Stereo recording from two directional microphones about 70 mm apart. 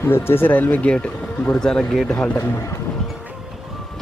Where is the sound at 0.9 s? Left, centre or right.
Centre.